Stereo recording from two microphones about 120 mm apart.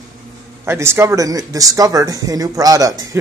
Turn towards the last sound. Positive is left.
turn(degrees=-30)  # may be behind; listen again after turning